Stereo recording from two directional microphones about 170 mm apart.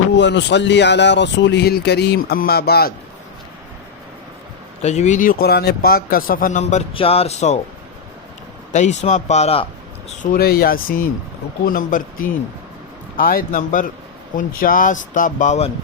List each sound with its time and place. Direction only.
0.2 s speech: 90° left; by 2.9 s 65° left (ahead or behind)
4.8 s speech: 40° left (ahead or behind)
8.7 s speech: 45° left (ahead or behind)
10.3 s speech: 65° left (ahead or behind); by 15.7 s 45° left (ahead or behind)